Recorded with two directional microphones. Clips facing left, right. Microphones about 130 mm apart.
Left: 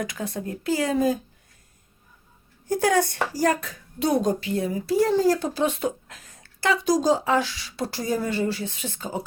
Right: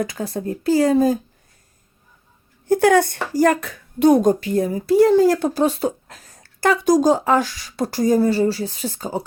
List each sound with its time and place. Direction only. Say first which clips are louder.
0.0 s a woman's voice: right 5 dB; 35° right (ahead or behind)
2.6 s speech: right 7 dB; 65° right (ahead or behind)
5.5 s a woman's voice: right 5 dB; 35° right (ahead or behind)